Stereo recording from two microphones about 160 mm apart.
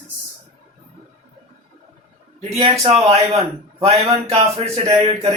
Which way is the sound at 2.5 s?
40° right (ahead or behind).